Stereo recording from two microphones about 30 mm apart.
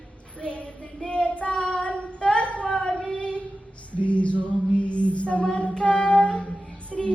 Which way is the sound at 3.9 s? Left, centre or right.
Left.